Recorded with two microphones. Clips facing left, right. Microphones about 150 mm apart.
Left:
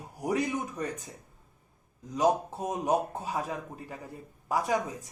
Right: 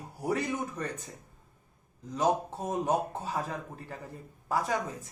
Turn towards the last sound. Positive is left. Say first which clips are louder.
# left 2 dB
turn(degrees=15)  # may be behind; listen again after turning